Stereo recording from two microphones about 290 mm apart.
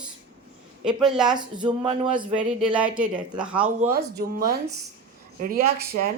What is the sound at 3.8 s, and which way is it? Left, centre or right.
Speech, right.